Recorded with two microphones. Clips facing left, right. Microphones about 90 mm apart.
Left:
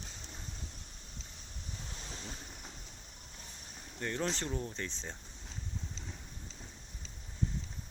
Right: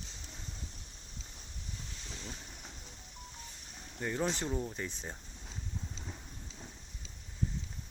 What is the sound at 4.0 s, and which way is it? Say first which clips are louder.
Speech: right 2 dB; 10° right (ahead or behind).